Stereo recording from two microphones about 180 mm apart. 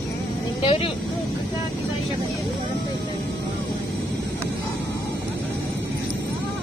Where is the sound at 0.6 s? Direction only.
30° left (ahead or behind).